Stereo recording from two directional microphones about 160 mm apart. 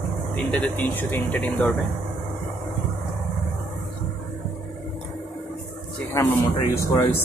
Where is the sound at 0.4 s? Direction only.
5° left (ahead or behind).